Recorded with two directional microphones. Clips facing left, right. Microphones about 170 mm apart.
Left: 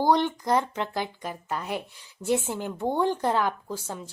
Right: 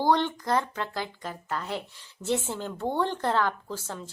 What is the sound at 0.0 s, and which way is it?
Speech, 15° left (ahead or behind).